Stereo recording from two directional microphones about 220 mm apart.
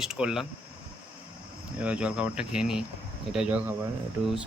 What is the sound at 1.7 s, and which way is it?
Speech, 5° right (ahead or behind).